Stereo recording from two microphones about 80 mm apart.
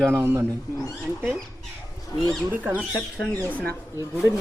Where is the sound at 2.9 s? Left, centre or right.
Centre.